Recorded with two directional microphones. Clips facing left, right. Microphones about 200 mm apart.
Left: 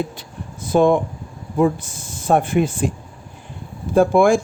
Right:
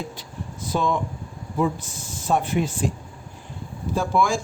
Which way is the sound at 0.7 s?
55° left (ahead or behind).